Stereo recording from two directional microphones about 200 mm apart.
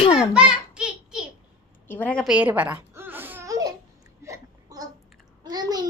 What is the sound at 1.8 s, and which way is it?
Babbling, 10° left (ahead or behind).